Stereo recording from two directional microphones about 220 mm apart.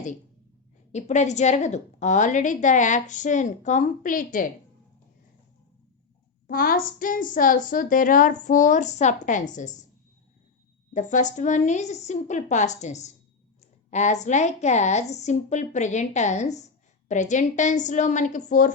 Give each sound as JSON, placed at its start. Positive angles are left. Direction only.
{"t": 0.9, "sound": "a woman's voice", "side_deg": 30}
{"t": 6.5, "sound": "a woman's voice", "side_deg": 40}
{"t": 10.9, "sound": "a woman's voice", "side_deg": 35}